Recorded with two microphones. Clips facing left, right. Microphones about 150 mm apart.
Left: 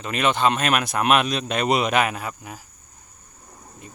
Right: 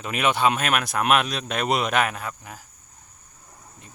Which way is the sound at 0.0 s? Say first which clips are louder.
Left 1 dB; 5° right (ahead or behind).